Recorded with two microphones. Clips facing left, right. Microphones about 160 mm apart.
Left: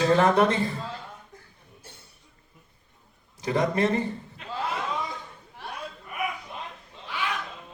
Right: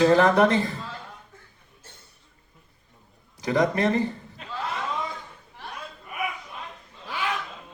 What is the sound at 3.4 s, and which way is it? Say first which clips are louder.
Speech: right 1 dB; 25° left (ahead or behind).